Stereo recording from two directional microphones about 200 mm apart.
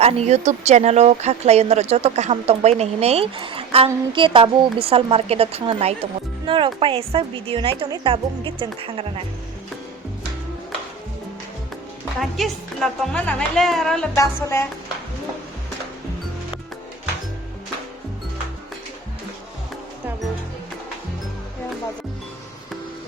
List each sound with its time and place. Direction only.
0.0 s a woman's voice: 30° right (ahead or behind)
12.4 s speech: centre (ahead or behind)
14.2 s music: 15° left (ahead or behind)